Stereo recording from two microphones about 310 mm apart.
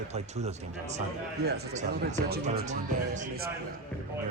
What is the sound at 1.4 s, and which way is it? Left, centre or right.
Speech, right.